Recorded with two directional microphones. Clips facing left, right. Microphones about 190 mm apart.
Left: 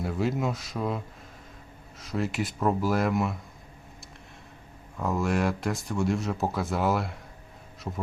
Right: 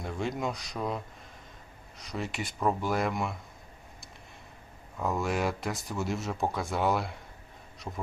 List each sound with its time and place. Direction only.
0.0 s speech: 5° left (ahead or behind)
4.9 s speech: centre (ahead or behind)